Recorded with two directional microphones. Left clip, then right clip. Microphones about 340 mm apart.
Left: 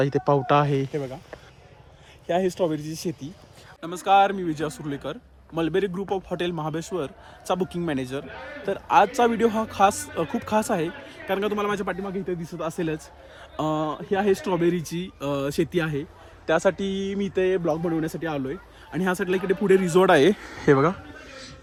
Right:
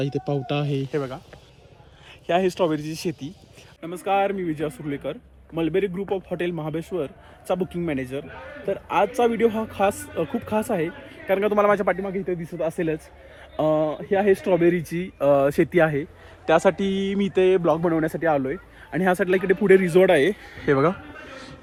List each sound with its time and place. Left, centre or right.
0.0 s speech: centre
0.9 s speech: right
2.7 s speech: centre
3.8 s speech: centre
16.5 s speech: right
17.8 s speech: centre; by 20.7 s left